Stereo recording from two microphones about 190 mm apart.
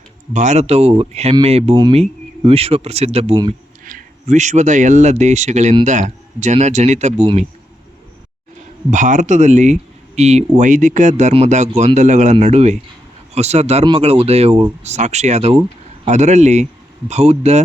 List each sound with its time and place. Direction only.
0.3 s speech: 35° right (ahead or behind)
3.8 s speech: 40° right (ahead or behind)
8.9 s speech: 40° right (ahead or behind)